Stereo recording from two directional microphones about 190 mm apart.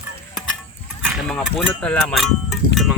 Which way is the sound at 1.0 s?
5° right (ahead or behind).